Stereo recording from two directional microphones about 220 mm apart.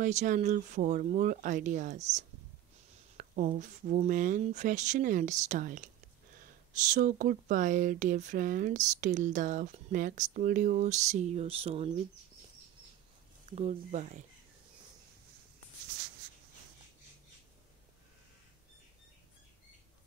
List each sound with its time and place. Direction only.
0.0 s speech: 35° right (ahead or behind)
6.9 s speech: 35° right (ahead or behind)
13.5 s speech: 30° right (ahead or behind)